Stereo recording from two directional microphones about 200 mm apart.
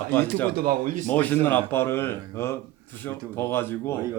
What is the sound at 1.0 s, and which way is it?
A man's voice, 10° left (ahead or behind).